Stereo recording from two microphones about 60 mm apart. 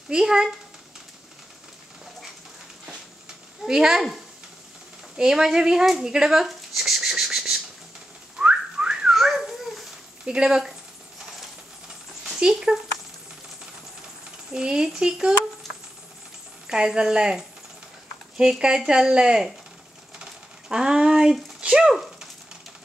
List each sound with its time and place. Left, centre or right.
0.1 s speech: centre
3.6 s speech: centre
6.1 s a sound: centre
8.4 s whistling: centre
9.1 s children playing: centre
10.2 s speech: centre
12.4 s speech: centre
14.5 s speech: centre
16.6 s speech: centre
20.2 s a sound: centre